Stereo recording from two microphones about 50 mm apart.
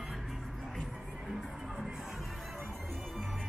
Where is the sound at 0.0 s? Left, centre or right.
Centre.